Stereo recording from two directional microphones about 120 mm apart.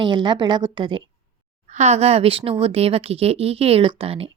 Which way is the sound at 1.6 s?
70° right (ahead or behind).